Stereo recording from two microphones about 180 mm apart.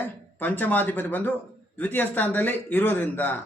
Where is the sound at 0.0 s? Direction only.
10° left (ahead or behind).